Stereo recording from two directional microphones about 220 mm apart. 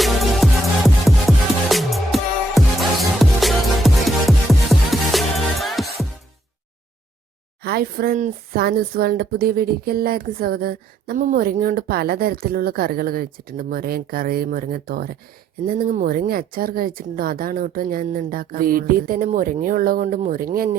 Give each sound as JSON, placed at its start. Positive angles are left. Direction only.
{"t": 0.0, "sound": "music", "side_deg": 0}
{"t": 1.7, "sound": "music", "side_deg": 0}
{"t": 7.6, "sound": "speech", "side_deg": -45}